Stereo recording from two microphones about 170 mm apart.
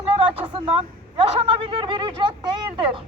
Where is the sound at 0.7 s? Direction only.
30° right (ahead or behind).